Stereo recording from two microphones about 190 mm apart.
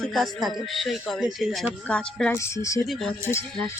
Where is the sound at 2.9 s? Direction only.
Centre (ahead or behind).